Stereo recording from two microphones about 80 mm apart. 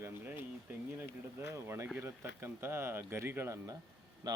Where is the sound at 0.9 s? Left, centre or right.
Right.